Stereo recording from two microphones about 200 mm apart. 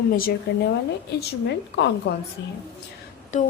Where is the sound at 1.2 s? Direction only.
60° left (ahead or behind).